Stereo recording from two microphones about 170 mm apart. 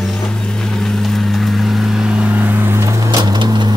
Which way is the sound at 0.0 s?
Centre (ahead or behind).